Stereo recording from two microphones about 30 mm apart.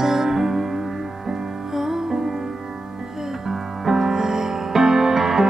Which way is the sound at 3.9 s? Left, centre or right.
Centre.